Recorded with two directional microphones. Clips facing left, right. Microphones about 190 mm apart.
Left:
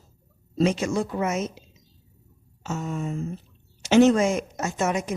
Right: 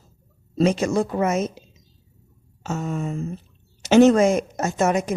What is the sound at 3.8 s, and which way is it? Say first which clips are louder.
A woman's voice: right 3 dB; 40° right (ahead or behind).